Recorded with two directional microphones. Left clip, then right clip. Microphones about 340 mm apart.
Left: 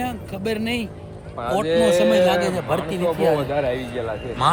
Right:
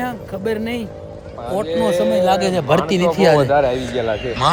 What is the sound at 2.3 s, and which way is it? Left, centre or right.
A man's voice, centre.